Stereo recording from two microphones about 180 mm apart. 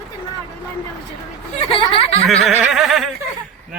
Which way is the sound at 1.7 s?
30° left (ahead or behind).